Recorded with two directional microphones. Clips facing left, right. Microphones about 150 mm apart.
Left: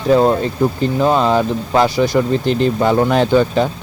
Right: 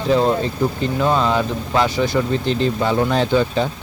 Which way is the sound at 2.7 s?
55° left (ahead or behind).